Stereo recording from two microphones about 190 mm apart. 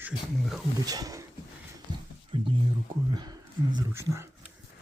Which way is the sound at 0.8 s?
20° right (ahead or behind).